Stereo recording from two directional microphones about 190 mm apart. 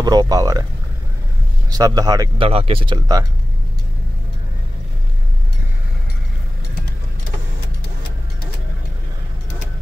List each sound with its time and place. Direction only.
0.0 s speech: 20° right (ahead or behind)
1.7 s speech: 20° right (ahead or behind)